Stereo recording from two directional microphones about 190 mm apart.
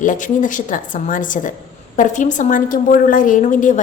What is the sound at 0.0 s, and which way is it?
A woman's voice, 40° left (ahead or behind).